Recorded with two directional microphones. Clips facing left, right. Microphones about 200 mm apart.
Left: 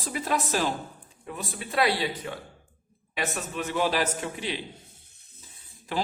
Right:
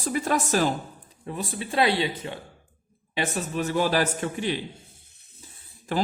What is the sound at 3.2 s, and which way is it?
A man's voice, 35° right (ahead or behind).